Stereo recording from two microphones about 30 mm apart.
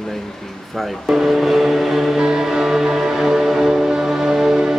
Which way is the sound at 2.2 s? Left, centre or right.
Right.